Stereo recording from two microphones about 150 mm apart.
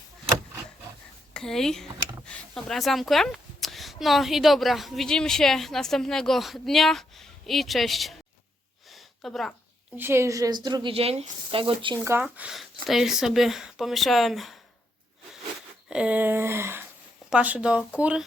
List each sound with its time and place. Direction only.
1.3 s speech: 5° left (ahead or behind)
8.9 s a sound: centre (ahead or behind)
10.0 s a woman's voice: 15° right (ahead or behind)
10.9 s speech: 40° right (ahead or behind)
11.9 s speech: 15° right (ahead or behind)
15.9 s speech: 5° right (ahead or behind)